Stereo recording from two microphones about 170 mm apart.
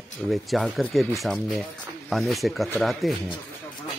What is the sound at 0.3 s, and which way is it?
Speech, centre (ahead or behind).